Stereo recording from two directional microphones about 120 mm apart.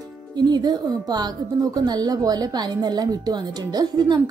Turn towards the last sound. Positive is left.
turn(degrees=-35)  # may be behind; listen again after turning